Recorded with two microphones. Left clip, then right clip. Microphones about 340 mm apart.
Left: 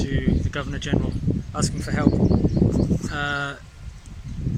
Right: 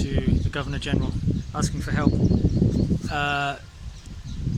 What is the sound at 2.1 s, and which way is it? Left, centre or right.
Speech, left.